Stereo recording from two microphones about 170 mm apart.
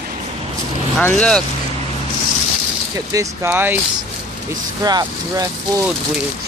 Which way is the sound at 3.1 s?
15° right (ahead or behind).